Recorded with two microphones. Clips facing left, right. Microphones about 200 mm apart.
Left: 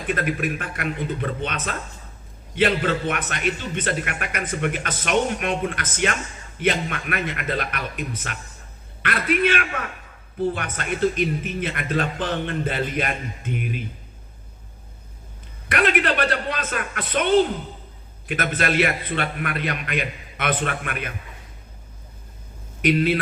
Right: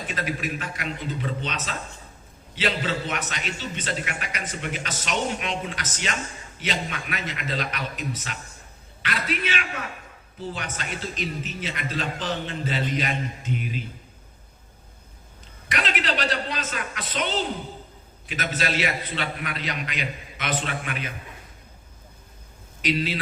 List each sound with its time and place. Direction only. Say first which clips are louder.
0.1 s a man's voice: left 6 dB; 55° left (ahead or behind)
15.7 s a man's voice: left 6 dB; 55° left (ahead or behind)
22.8 s a man's voice: left 6 dB; 55° left (ahead or behind)